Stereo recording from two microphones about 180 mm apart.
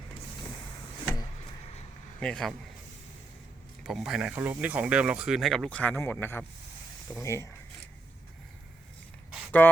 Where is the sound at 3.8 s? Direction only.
Centre (ahead or behind); by 7.5 s 15° left (ahead or behind).